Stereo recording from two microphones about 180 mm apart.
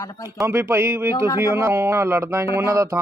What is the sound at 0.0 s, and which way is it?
Speech, 20° left (ahead or behind).